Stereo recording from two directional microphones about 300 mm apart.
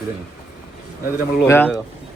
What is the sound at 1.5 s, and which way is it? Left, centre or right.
Speech, centre.